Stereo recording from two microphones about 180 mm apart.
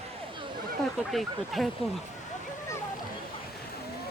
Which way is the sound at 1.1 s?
Centre (ahead or behind).